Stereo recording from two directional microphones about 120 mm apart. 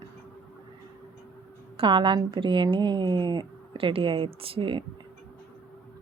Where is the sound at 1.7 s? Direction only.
45° right (ahead or behind).